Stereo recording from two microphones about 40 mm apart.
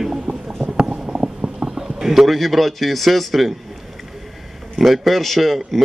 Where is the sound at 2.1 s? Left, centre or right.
Centre.